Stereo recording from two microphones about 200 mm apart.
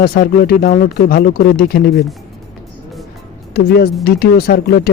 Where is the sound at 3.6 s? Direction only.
50° left (ahead or behind).